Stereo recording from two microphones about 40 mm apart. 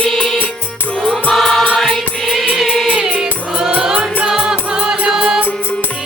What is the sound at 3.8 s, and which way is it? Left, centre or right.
Music, centre.